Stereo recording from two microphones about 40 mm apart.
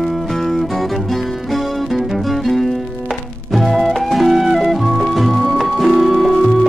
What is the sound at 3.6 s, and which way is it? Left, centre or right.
Music, centre.